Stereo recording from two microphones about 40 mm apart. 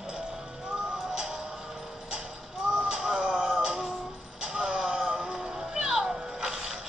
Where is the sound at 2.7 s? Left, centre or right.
Centre.